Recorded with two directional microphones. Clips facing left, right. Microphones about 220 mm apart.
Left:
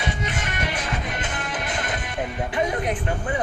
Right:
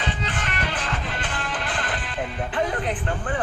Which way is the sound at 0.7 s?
15° left (ahead or behind).